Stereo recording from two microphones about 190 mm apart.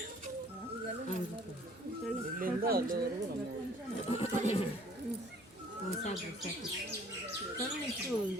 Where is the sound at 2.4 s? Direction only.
50° right (ahead or behind).